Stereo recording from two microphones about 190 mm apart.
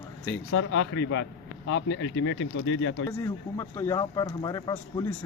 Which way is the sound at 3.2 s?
15° left (ahead or behind).